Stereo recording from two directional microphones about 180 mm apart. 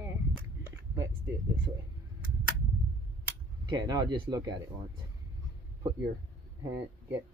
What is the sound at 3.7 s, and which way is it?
Speech, 20° right (ahead or behind).